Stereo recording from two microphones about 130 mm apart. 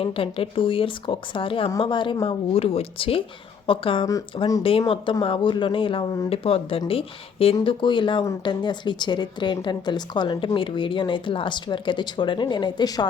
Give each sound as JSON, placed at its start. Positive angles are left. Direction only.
{"t": 0.0, "sound": "speech", "side_deg": 45}
{"t": 2.2, "sound": "speech", "side_deg": 50}